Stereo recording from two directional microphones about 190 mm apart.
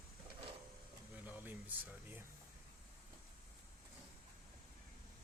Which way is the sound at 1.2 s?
10° right (ahead or behind).